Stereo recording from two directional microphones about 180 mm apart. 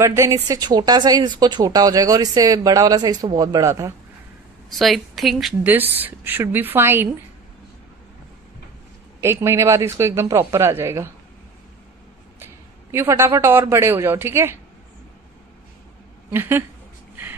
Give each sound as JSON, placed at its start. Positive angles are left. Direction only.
{"t": 0.0, "sound": "speech", "side_deg": -15}
{"t": 4.6, "sound": "a woman's voice", "side_deg": 0}
{"t": 9.2, "sound": "a woman's voice", "side_deg": -15}
{"t": 12.9, "sound": "a woman's voice", "side_deg": -15}
{"t": 16.3, "sound": "a woman's voice", "side_deg": -10}